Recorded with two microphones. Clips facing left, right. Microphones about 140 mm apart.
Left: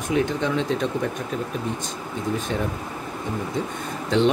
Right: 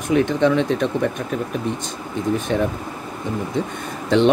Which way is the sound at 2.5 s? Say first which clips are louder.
Right 8 dB; 70° right (ahead or behind).